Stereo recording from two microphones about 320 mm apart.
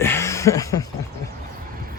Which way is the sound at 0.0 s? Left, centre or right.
Centre.